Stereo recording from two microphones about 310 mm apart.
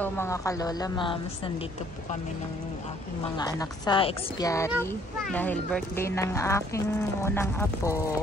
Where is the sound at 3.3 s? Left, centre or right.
Centre.